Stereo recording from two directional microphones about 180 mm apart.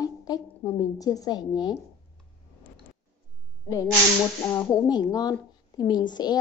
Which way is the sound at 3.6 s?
20° left (ahead or behind).